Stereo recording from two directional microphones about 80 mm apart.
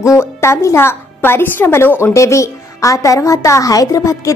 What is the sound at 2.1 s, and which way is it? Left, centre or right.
A woman's voice, left.